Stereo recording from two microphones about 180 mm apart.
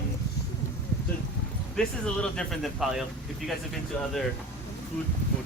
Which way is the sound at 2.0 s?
5° left (ahead or behind).